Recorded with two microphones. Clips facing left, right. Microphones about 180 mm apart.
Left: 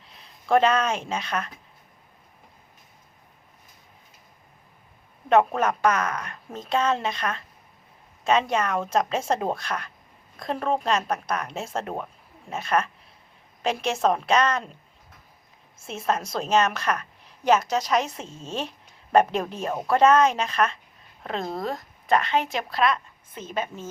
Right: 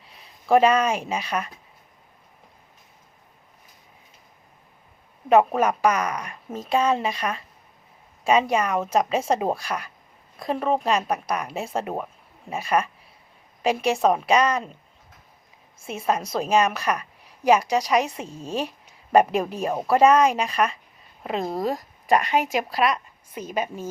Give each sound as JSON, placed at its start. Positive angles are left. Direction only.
{"t": 0.0, "sound": "speech", "side_deg": -5}
{"t": 5.3, "sound": "a woman's voice", "side_deg": -5}
{"t": 15.9, "sound": "a woman's voice", "side_deg": -10}